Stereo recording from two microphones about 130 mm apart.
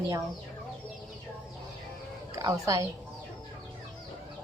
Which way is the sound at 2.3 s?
25° right (ahead or behind).